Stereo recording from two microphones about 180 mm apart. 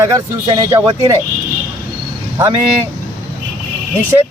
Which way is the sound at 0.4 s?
20° right (ahead or behind).